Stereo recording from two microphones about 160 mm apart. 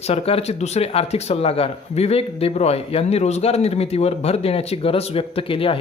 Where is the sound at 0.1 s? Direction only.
40° left (ahead or behind).